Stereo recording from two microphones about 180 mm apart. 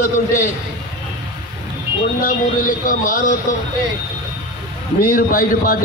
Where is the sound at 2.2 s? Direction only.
50° left (ahead or behind).